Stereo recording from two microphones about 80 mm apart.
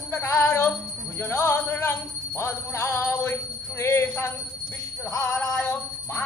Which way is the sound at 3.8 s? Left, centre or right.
Left.